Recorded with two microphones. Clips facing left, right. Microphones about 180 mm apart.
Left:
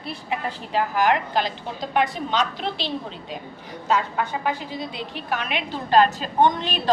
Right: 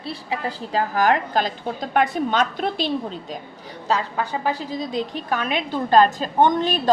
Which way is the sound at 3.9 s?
35° right (ahead or behind).